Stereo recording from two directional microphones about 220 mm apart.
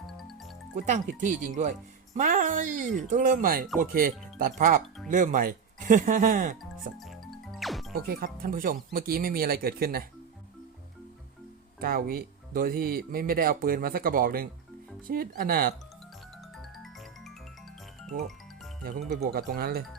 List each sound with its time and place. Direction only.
0.9 s speech: 35° right (ahead or behind)
7.0 s music: centre (ahead or behind)
7.9 s speech: 45° right (ahead or behind)
11.8 s speech: 40° right (ahead or behind)
16.7 s music: centre (ahead or behind)
18.8 s speech: 40° right (ahead or behind)